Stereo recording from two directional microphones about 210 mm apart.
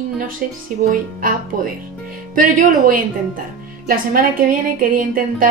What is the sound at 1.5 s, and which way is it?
A woman's voice, 40° right (ahead or behind).